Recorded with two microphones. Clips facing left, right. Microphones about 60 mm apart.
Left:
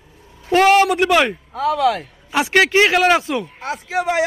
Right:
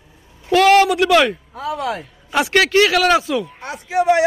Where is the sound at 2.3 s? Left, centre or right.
Centre.